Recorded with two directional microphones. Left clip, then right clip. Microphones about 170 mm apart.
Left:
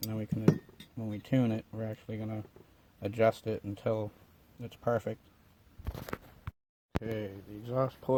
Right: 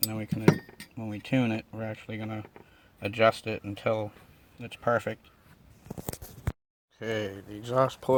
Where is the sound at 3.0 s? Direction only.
15° left (ahead or behind).